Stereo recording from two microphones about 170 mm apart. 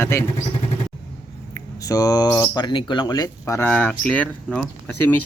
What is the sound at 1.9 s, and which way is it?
Speech, 20° left (ahead or behind).